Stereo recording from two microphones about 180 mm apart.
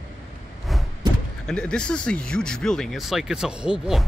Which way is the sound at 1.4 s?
5° left (ahead or behind).